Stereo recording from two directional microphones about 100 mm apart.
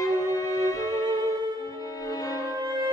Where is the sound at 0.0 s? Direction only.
30° left (ahead or behind).